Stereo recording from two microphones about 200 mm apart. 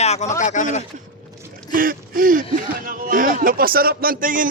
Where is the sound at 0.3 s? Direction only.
40° left (ahead or behind).